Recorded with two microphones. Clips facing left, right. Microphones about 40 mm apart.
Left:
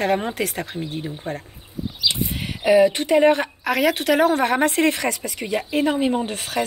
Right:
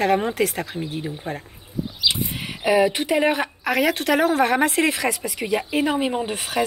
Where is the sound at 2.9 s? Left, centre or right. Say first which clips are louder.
Left 4 dB; centre.